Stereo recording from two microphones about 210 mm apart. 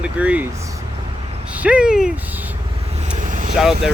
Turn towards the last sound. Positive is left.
turn(degrees=0)  # may be behind; listen again after turning